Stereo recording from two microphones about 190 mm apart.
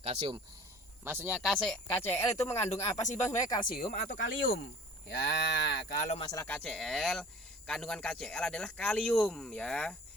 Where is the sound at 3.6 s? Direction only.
45° left (ahead or behind).